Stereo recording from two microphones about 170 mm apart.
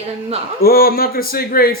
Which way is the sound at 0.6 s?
60° left (ahead or behind).